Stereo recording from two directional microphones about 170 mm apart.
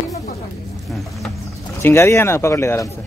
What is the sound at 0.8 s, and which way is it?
Speech, centre (ahead or behind).